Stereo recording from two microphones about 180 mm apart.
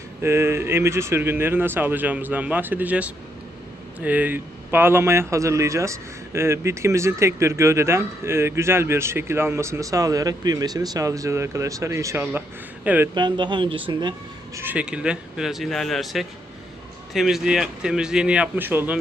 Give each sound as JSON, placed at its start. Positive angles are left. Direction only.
{"t": 0.2, "sound": "speech", "side_deg": -15}
{"t": 13.1, "sound": "speech", "side_deg": -25}
{"t": 14.5, "sound": "a man's voice", "side_deg": -10}